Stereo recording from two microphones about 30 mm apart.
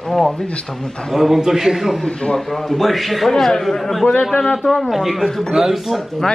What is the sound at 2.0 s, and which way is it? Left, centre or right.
Speech, left.